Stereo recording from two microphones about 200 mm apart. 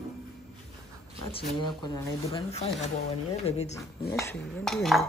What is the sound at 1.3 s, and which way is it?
Speech, 20° left (ahead or behind).